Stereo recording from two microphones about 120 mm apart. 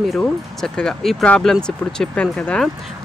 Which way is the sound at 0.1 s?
5° left (ahead or behind).